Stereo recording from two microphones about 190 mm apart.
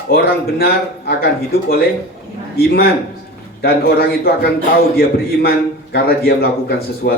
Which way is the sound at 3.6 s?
55° left (ahead or behind).